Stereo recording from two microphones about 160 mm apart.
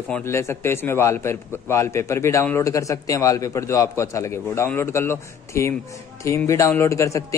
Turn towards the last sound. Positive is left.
turn(degrees=20)  # may be behind; listen again after turning